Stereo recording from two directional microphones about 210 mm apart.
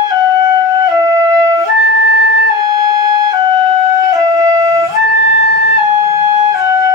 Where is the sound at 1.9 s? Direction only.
50° left (ahead or behind).